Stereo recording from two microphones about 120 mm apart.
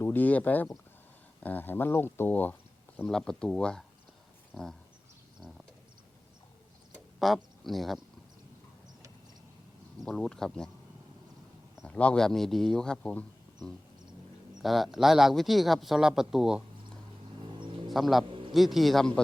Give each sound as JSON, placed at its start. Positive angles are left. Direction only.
{"t": 0.0, "sound": "speech", "side_deg": 15}
{"t": 5.4, "sound": "a sound", "side_deg": 0}
{"t": 7.2, "sound": "speech", "side_deg": 0}
{"t": 10.0, "sound": "speech", "side_deg": 5}
{"t": 11.9, "sound": "speech", "side_deg": 10}
{"t": 14.6, "sound": "speech", "side_deg": 0}
{"t": 17.9, "sound": "speech", "side_deg": 0}
{"t": 18.3, "sound": "a sound", "side_deg": -45}
{"t": 18.5, "sound": "speech", "side_deg": 0}